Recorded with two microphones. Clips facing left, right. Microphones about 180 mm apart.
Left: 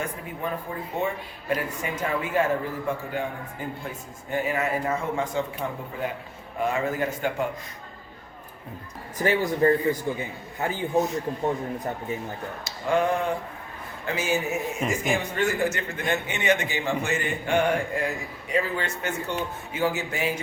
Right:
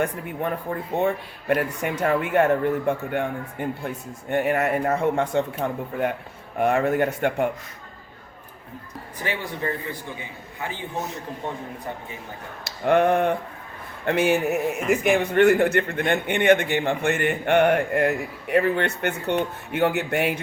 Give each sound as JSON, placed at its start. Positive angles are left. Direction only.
{"t": 0.0, "sound": "a man's voice", "side_deg": -60}
{"t": 9.1, "sound": "a man's voice", "side_deg": 40}
{"t": 12.6, "sound": "a man's voice", "side_deg": -60}